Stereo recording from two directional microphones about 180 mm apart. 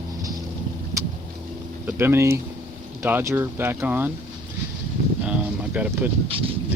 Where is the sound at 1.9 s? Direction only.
15° right (ahead or behind).